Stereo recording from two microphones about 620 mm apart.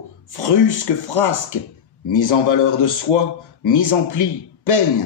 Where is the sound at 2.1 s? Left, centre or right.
Left.